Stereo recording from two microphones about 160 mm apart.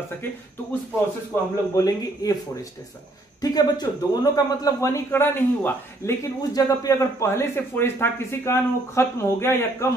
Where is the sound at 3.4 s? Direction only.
25° left (ahead or behind).